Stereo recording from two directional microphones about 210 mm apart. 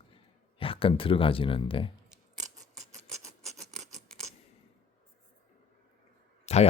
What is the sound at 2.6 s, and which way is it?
Scissors, centre (ahead or behind).